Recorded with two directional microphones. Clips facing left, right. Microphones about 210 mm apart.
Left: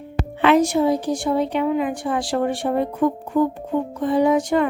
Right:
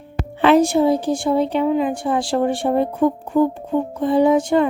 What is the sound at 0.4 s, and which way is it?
A woman's voice, 30° right (ahead or behind).